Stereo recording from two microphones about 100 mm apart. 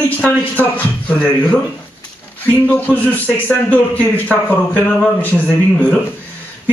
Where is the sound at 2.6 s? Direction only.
15° left (ahead or behind).